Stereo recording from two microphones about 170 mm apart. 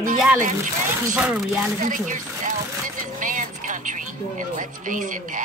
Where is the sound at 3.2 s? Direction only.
50° right (ahead or behind).